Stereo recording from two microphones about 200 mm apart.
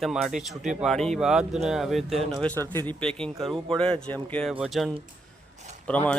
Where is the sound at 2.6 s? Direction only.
20° right (ahead or behind).